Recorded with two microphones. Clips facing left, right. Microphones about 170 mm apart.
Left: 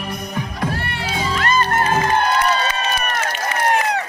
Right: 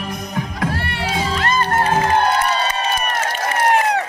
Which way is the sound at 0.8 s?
80° right.